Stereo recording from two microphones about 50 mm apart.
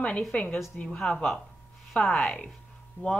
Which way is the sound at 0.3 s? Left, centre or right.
Left.